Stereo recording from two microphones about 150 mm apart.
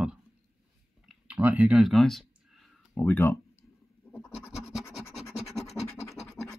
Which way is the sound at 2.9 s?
15° left (ahead or behind).